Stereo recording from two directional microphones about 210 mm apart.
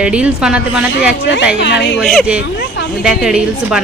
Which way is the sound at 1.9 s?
Centre (ahead or behind).